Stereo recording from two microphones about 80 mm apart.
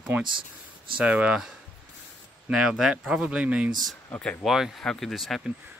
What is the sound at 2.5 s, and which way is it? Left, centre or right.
Speech, centre.